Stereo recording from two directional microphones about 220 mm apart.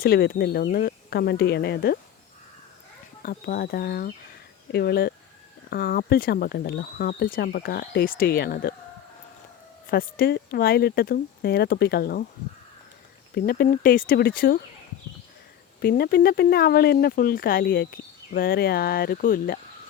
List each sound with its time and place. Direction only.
0.0 s speech: 45° left (ahead or behind)
3.2 s speech: 45° left (ahead or behind)
9.9 s speech: 45° left (ahead or behind)
13.3 s speech: 45° left (ahead or behind)
15.8 s speech: 45° left (ahead or behind)